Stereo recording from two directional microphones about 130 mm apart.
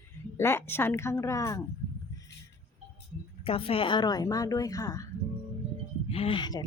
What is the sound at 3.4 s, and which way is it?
A woman's voice, 45° left (ahead or behind).